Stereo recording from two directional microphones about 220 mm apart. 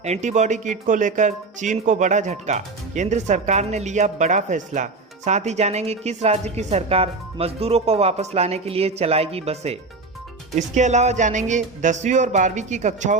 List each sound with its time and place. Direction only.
0.0 s speech: 30° right (ahead or behind)